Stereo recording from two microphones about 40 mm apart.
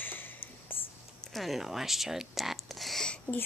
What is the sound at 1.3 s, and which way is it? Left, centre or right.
Speech, centre.